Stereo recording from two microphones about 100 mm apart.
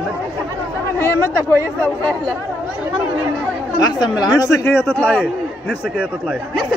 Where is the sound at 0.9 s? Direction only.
25° left (ahead or behind).